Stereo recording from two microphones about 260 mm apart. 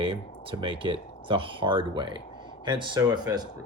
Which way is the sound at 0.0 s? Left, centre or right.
Centre.